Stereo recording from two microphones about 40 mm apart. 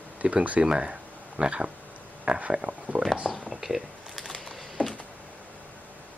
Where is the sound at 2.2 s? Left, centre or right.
Right.